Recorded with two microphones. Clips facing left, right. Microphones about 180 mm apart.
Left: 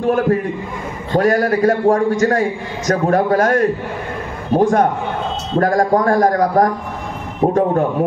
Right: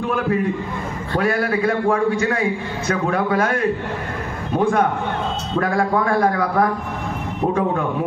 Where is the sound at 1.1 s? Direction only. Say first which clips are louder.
Left 5 dB; 40° left (ahead or behind).